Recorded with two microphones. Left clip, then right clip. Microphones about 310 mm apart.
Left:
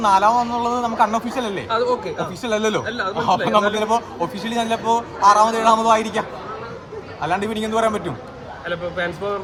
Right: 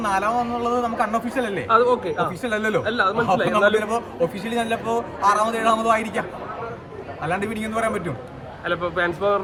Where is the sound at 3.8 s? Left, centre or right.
Centre.